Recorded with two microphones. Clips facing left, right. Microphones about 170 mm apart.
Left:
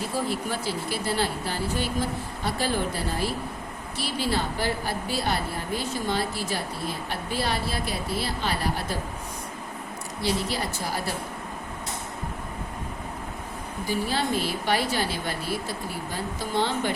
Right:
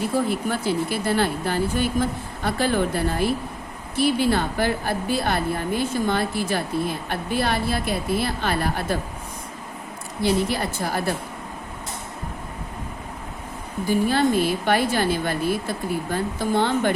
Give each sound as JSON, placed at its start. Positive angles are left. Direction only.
{"t": 0.3, "sound": "speech", "side_deg": -55}
{"t": 10.2, "sound": "speech", "side_deg": -55}
{"t": 13.8, "sound": "a woman's voice", "side_deg": -55}